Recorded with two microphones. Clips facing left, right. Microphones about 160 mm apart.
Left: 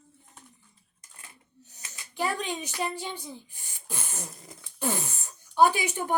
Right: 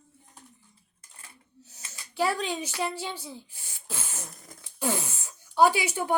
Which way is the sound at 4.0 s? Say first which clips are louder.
Left 1 dB; 5° right (ahead or behind).